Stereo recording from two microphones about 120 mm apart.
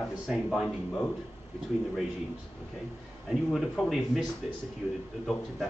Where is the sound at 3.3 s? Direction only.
5° left (ahead or behind).